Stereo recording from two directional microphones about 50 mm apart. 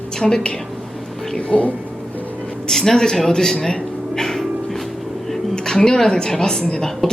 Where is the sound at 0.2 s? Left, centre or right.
Centre.